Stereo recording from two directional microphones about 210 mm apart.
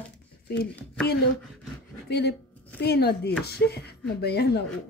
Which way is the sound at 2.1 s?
50° left (ahead or behind).